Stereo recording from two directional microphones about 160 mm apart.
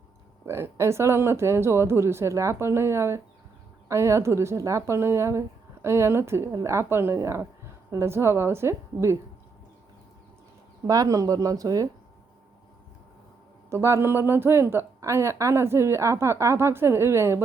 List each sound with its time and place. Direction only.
0.4 s a woman's voice: 15° right (ahead or behind)
10.8 s speech: 20° right (ahead or behind)
13.7 s a woman's voice: 15° right (ahead or behind)